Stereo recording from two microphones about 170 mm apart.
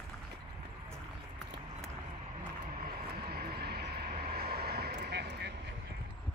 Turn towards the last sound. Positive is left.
turn(degrees=-80)